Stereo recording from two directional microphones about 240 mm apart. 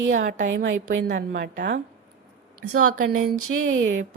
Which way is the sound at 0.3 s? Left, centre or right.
Right.